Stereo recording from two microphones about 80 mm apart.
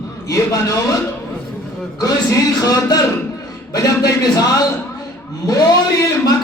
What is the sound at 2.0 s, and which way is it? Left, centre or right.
Speech, left.